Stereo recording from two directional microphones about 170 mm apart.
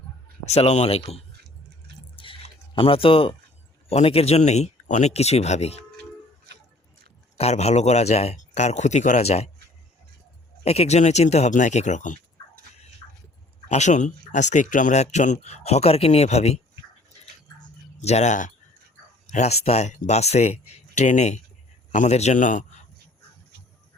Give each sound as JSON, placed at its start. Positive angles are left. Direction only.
{"t": 0.4, "sound": "speech", "side_deg": 40}
{"t": 2.1, "sound": "drip", "side_deg": 30}
{"t": 3.8, "sound": "speech", "side_deg": 35}
{"t": 7.3, "sound": "speech", "side_deg": 40}
{"t": 10.6, "sound": "speech", "side_deg": 40}
{"t": 13.7, "sound": "speech", "side_deg": 45}
{"t": 18.0, "sound": "a man's voice", "side_deg": 40}